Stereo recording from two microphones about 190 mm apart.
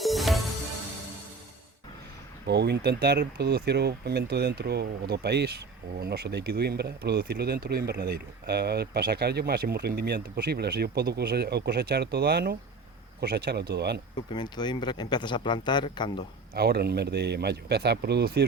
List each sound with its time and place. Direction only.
0.0 s music: centre (ahead or behind)
2.5 s speech: 60° right (ahead or behind)
14.3 s speech: 25° left (ahead or behind)
16.6 s speech: 55° right (ahead or behind)